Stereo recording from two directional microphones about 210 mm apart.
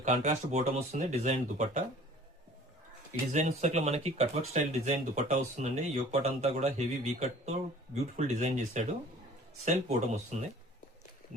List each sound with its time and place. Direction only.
0.0 s speech: 35° right (ahead or behind)
3.1 s speech: 35° right (ahead or behind)